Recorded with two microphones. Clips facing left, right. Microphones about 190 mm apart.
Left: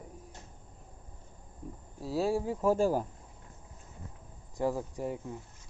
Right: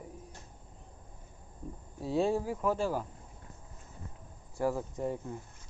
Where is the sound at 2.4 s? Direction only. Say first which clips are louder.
Left 3 dB; 25° left (ahead or behind).